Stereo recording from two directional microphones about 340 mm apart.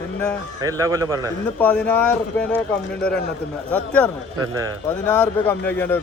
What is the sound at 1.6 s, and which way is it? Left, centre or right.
A man's voice, centre.